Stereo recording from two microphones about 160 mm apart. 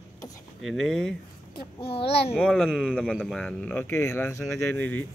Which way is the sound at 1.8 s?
35° left (ahead or behind).